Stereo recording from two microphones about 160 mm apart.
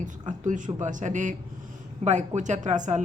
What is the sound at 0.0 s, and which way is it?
A woman's voice, 50° right (ahead or behind).